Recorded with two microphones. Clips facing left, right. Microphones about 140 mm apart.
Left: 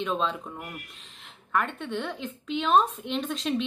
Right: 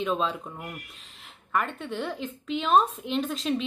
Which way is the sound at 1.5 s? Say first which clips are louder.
Left 1 dB; centre (ahead or behind).